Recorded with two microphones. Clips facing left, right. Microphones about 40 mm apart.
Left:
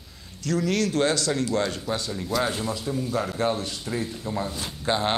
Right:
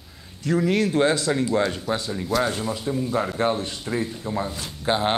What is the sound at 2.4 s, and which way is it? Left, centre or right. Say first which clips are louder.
Speech: right 2 dB; centre.